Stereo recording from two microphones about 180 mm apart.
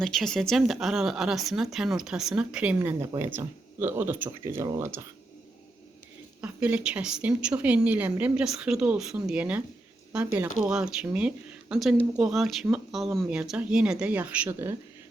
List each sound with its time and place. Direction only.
0.0 s speech: 5° left (ahead or behind)
2.7 s a woman's voice: 20° right (ahead or behind)
6.4 s a woman's voice: 5° right (ahead or behind)